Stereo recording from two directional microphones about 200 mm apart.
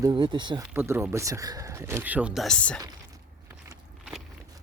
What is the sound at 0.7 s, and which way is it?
Speech, 10° right (ahead or behind).